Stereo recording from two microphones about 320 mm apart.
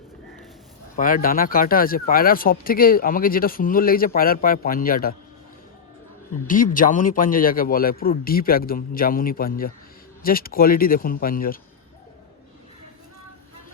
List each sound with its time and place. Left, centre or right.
0.9 s speech: left
6.5 s speech: left